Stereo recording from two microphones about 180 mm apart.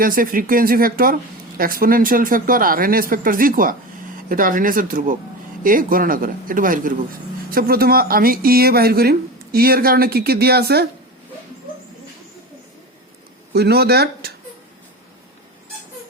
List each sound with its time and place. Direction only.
0.0 s speech: 50° right (ahead or behind)
13.5 s speech: 60° right (ahead or behind)